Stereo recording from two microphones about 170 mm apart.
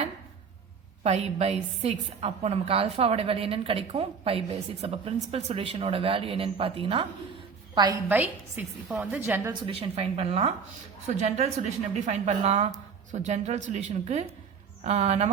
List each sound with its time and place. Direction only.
1.0 s a woman's voice: 40° right (ahead or behind)
8.1 s a woman's voice: 10° right (ahead or behind)
9.6 s a woman's voice: 35° right (ahead or behind)